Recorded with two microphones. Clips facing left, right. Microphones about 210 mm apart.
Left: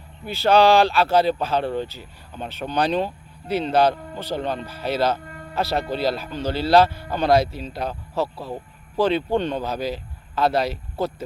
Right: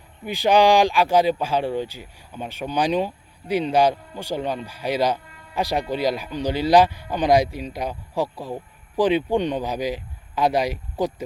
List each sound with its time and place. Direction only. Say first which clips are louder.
0.3 s speech: left 1 dB; 15° right (ahead or behind)
5.2 s music: left 9 dB; 50° left (ahead or behind)
5.5 s speech: even; 15° right (ahead or behind)